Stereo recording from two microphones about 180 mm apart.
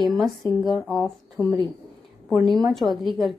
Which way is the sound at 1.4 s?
10° left (ahead or behind).